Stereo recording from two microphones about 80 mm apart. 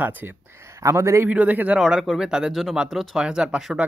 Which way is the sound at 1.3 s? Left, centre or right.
Centre.